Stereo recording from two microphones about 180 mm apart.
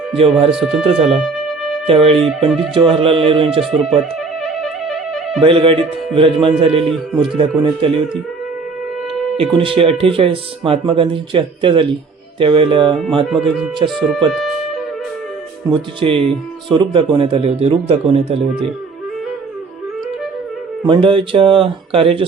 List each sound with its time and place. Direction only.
0.2 s speech: 30° right (ahead or behind)
0.5 s speech: centre (ahead or behind)
0.9 s speech: 35° right (ahead or behind)
3.6 s speech: centre (ahead or behind)
4.6 s music: centre (ahead or behind)
5.4 s speech: 30° right (ahead or behind)
9.4 s speech: 30° right (ahead or behind)
13.2 s speech: centre (ahead or behind)
15.7 s speech: 30° right (ahead or behind)
20.8 s speech: 30° right (ahead or behind)